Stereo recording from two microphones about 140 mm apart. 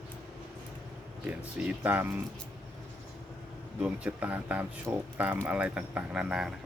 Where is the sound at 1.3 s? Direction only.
10° right (ahead or behind).